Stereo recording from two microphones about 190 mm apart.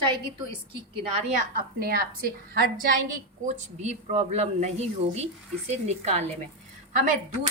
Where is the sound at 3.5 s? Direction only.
40° right (ahead or behind).